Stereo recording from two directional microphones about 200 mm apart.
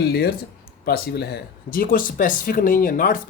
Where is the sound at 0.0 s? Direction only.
50° left (ahead or behind).